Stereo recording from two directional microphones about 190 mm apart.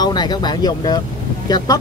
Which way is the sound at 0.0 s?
20° left (ahead or behind).